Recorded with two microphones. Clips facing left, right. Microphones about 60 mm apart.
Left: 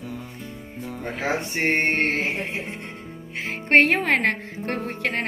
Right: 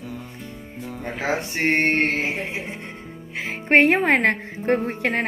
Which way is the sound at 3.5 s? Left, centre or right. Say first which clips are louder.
Right 1 dB; centre.